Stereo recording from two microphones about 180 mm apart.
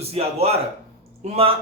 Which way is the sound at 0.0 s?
35° right (ahead or behind).